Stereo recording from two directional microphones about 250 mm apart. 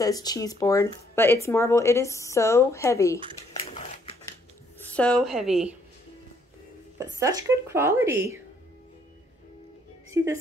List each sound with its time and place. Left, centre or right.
0.0 s speech: centre
3.5 s a sound: left
4.9 s a woman's voice: centre
7.2 s speech: centre